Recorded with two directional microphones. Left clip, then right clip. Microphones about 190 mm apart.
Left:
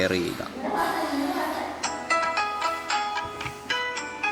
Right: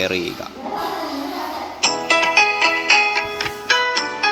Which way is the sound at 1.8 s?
40° right (ahead or behind).